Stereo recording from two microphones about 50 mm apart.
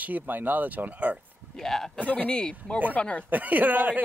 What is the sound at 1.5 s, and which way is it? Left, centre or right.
Speech, centre.